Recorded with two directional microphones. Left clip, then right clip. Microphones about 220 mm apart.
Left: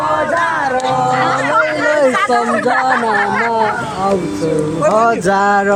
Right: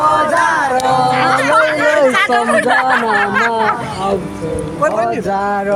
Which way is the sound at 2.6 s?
5° right (ahead or behind).